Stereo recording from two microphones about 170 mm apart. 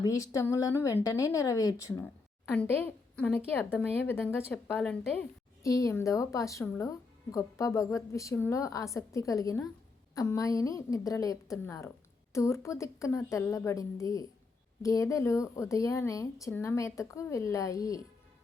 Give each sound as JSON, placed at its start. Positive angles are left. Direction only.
{"t": 0.0, "sound": "a woman's voice", "side_deg": 20}
{"t": 5.6, "sound": "a woman's voice", "side_deg": 20}